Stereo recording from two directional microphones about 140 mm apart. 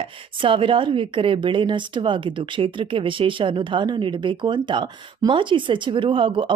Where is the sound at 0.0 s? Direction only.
40° right (ahead or behind).